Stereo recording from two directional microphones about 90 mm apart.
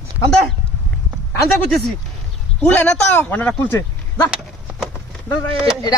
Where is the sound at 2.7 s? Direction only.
20° left (ahead or behind).